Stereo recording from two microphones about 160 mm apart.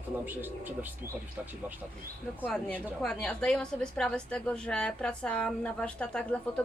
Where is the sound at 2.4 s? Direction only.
5° left (ahead or behind).